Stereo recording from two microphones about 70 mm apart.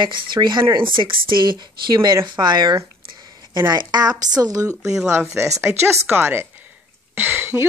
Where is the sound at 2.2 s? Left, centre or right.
Right.